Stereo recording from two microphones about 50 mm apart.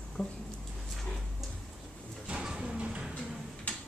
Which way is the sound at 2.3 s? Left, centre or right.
Centre.